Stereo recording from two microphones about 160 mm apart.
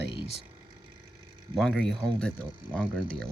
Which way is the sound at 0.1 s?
35° left (ahead or behind).